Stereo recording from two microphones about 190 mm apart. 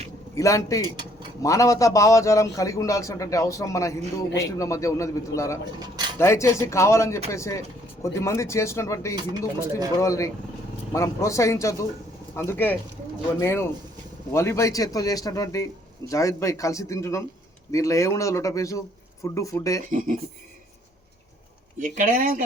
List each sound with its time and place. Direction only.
0.3 s a man's voice: 15° left (ahead or behind)
19.9 s speech: 45° right (ahead or behind)
21.8 s speech: 45° right (ahead or behind)